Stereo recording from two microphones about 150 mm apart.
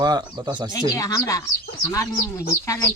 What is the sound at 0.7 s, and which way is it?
Speech, 25° left (ahead or behind).